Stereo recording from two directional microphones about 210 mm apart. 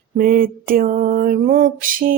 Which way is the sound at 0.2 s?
45° right (ahead or behind).